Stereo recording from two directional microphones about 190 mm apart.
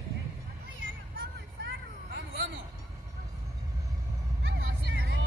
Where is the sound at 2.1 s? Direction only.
70° right (ahead or behind).